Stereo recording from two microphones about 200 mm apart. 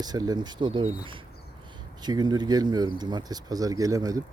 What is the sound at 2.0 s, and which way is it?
Speech, 20° right (ahead or behind).